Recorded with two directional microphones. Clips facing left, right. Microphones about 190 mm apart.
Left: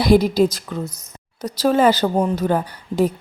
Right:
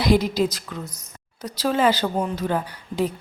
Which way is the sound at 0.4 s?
45° left (ahead or behind).